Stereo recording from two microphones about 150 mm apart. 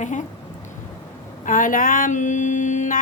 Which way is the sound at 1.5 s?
65° left (ahead or behind).